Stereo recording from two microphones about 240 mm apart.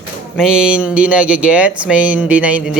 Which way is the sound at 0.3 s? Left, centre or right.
Centre.